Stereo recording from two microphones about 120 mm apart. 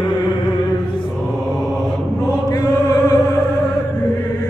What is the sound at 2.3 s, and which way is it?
Chant, 30° left (ahead or behind).